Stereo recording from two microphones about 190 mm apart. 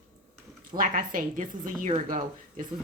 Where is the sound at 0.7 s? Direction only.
45° right (ahead or behind).